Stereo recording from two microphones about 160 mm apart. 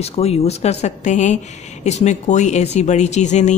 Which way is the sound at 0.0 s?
40° left (ahead or behind).